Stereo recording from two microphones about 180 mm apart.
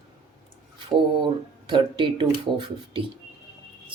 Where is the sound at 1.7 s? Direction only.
25° right (ahead or behind).